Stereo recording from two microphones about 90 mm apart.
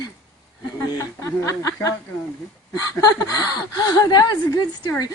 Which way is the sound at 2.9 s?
40° left (ahead or behind).